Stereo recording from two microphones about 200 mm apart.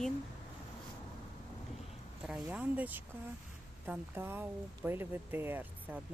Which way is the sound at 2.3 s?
5° right (ahead or behind).